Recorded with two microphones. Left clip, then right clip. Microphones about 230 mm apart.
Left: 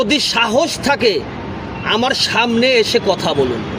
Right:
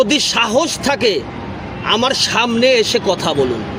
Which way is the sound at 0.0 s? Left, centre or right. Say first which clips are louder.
Right 1 dB; centre.